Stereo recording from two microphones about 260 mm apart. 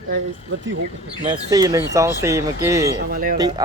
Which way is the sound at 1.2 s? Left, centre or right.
Centre.